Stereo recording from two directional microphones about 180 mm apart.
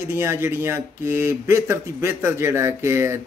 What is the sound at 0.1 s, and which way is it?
Speech, 15° right (ahead or behind).